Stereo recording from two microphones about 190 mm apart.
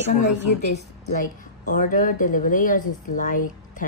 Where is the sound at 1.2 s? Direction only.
45° left (ahead or behind).